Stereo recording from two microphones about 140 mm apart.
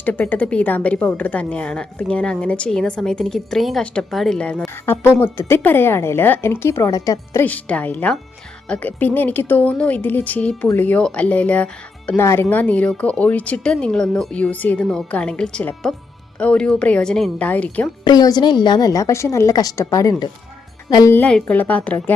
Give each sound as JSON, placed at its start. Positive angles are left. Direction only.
{"t": 0.0, "sound": "a woman's voice", "side_deg": 10}
{"t": 7.4, "sound": "a woman's voice", "side_deg": 10}
{"t": 18.0, "sound": "a woman's voice", "side_deg": 30}
{"t": 21.1, "sound": "a woman's voice", "side_deg": 10}